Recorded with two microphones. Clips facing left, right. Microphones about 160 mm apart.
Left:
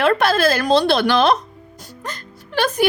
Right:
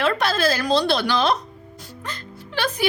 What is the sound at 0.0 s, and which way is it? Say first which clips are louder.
Speech: left 5 dB; 55° left (ahead or behind).